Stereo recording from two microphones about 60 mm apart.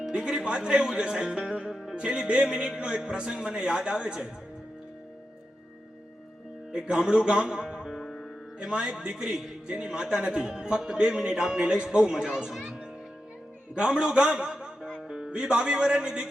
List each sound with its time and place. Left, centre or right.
0.0 s speech: centre
6.7 s a man's voice: centre
8.5 s speech: centre